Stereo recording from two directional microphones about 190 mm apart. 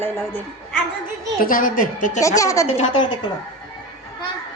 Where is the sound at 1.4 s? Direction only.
45° left (ahead or behind).